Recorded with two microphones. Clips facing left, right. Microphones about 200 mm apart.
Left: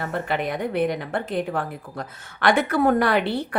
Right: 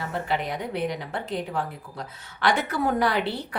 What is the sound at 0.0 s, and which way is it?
A woman's voice, 55° left (ahead or behind).